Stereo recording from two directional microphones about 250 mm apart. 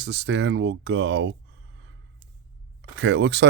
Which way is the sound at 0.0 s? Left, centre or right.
Right.